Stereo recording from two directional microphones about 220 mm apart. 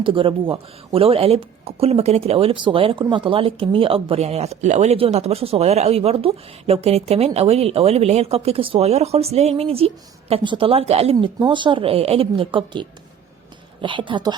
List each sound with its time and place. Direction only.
0.0 s speech: 25° right (ahead or behind)
13.8 s speech: 20° right (ahead or behind)